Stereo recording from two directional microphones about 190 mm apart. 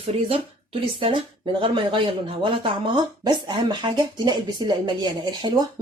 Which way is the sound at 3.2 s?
25° right (ahead or behind).